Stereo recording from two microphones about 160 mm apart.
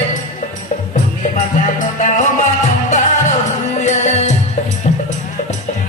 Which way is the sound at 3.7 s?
45° left (ahead or behind).